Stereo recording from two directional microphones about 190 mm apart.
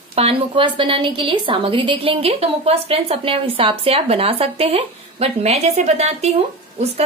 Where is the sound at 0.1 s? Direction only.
30° right (ahead or behind).